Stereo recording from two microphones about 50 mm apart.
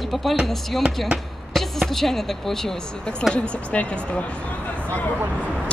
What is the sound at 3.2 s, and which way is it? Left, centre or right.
Speech, left.